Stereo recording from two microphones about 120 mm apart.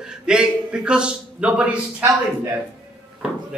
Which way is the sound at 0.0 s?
5° right (ahead or behind).